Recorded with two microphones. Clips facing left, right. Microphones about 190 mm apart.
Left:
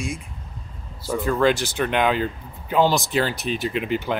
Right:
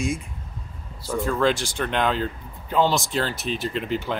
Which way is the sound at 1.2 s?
Centre (ahead or behind).